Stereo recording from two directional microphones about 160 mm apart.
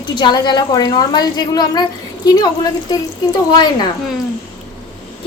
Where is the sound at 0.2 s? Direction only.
30° left (ahead or behind).